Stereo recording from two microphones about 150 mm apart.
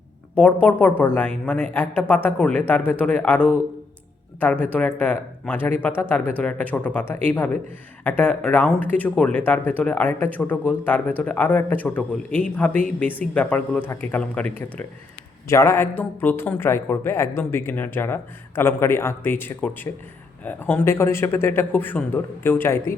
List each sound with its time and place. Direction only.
0.3 s a man's voice: 10° left (ahead or behind)
15.4 s a man's voice: 20° left (ahead or behind)